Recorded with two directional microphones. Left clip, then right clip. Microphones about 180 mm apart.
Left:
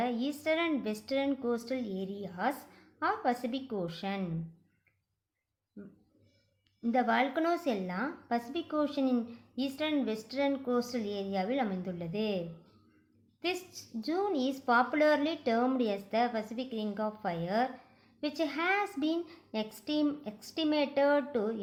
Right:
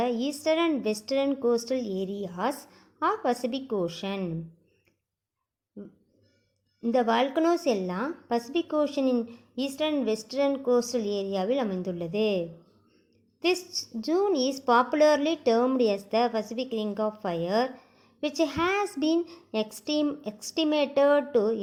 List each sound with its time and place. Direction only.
0.0 s a woman's voice: 35° right (ahead or behind)
6.8 s a woman's voice: 35° right (ahead or behind)
14.0 s a woman's voice: 35° right (ahead or behind)